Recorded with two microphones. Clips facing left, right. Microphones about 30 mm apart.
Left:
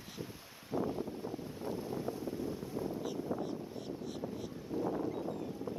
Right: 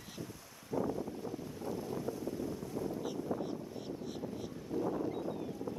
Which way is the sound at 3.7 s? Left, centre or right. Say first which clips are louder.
Even; centre.